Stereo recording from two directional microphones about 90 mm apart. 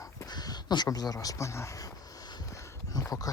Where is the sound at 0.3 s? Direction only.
50° left (ahead or behind).